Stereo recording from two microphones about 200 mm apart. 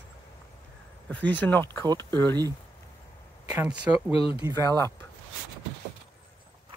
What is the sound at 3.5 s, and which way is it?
Speech, 10° right (ahead or behind).